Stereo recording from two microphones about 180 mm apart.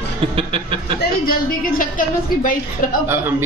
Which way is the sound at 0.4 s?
30° right (ahead or behind).